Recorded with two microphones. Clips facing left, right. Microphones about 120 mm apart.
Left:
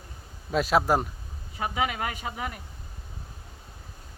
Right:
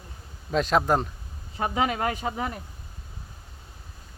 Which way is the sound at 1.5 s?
35° right (ahead or behind).